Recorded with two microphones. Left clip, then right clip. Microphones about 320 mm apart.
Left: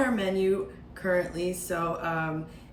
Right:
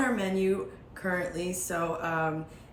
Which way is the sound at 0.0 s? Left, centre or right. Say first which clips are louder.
Left 2 dB; centre.